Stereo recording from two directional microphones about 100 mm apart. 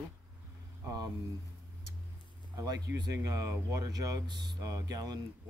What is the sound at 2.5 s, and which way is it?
Speech, 35° right (ahead or behind).